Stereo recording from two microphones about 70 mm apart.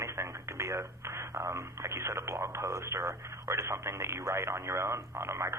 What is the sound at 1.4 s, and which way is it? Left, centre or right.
Speech, right.